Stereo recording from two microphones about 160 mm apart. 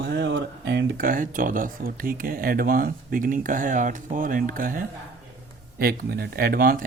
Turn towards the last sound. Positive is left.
turn(degrees=-65)  # may be behind; listen again after turning